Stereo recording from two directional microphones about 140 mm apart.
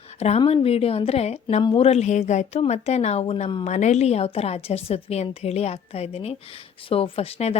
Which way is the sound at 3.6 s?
55° left (ahead or behind).